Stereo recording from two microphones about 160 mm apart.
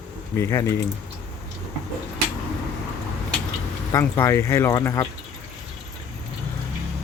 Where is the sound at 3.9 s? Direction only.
15° left (ahead or behind).